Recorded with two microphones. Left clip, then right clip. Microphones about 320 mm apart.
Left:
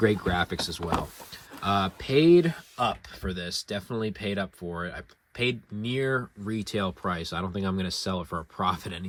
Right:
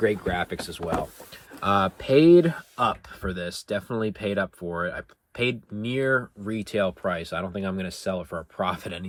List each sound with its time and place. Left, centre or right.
0.0 s speech: centre